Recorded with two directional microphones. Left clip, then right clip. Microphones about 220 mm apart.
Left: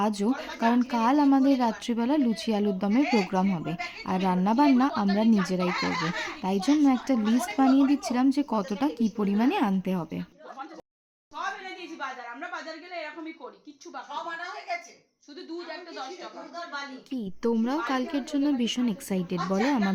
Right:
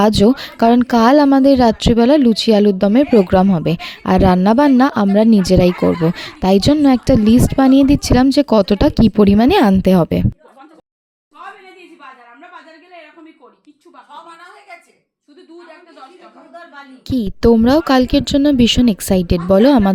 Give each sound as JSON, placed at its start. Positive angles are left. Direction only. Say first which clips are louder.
{"t": 0.0, "sound": "speech", "louder": "right 15 dB", "side_deg": -40}
{"t": 17.1, "sound": "speech", "louder": "right 17 dB", "side_deg": -40}